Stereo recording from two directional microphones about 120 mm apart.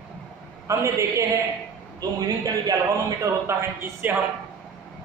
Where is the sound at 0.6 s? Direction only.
25° right (ahead or behind).